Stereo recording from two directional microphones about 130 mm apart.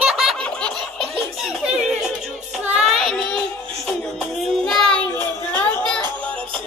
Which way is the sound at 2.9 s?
5° left (ahead or behind).